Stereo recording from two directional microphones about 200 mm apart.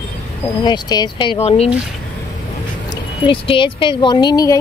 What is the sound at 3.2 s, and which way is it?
Speech, 25° left (ahead or behind).